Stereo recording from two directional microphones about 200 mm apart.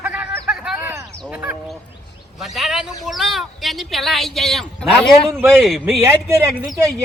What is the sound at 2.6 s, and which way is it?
Speech, centre (ahead or behind).